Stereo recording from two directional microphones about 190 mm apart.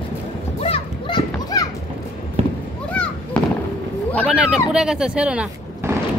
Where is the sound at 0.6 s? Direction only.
30° left (ahead or behind).